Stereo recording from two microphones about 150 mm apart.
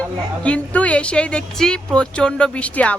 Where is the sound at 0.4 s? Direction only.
10° left (ahead or behind).